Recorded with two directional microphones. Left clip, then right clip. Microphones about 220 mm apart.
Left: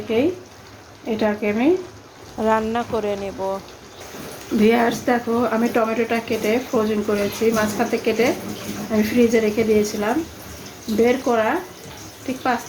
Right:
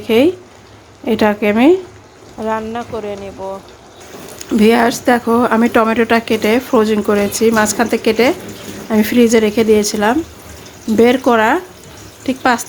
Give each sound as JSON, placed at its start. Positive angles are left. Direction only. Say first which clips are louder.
{"t": 0.1, "sound": "speech", "louder": "right 8 dB", "side_deg": -40}
{"t": 2.4, "sound": "speech", "louder": "even", "side_deg": 0}
{"t": 4.6, "sound": "speech", "louder": "right 6 dB", "side_deg": -35}